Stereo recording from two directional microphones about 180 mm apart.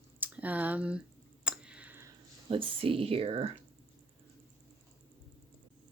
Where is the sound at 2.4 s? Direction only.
30° right (ahead or behind).